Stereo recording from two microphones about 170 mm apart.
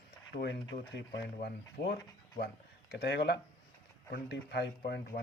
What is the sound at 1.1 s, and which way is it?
Speech, 70° left (ahead or behind).